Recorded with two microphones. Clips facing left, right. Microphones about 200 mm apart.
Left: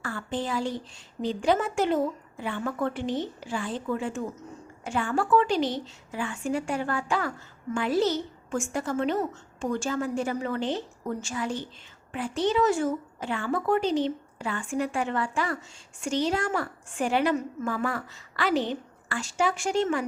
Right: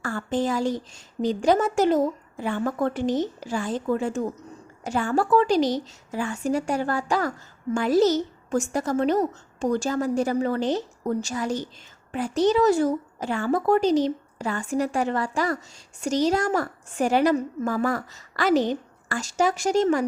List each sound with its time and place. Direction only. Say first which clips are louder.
0.0 s a woman's voice: right 6 dB; 45° right (ahead or behind)